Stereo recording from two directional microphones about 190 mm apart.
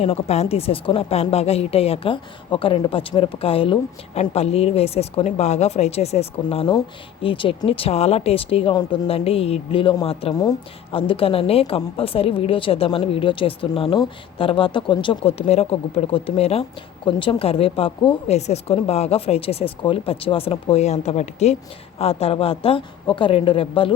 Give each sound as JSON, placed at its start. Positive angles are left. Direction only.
{"t": 0.0, "sound": "a woman's voice", "side_deg": 35}